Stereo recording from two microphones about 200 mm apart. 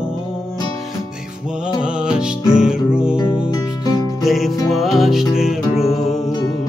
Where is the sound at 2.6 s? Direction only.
5° right (ahead or behind).